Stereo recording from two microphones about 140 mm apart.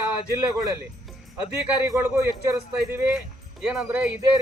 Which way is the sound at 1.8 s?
20° right (ahead or behind).